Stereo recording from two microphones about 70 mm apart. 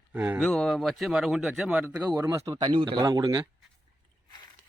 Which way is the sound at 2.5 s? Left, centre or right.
Right.